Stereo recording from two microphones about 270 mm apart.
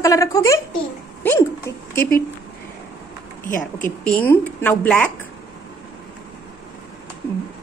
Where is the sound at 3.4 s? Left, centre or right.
Left.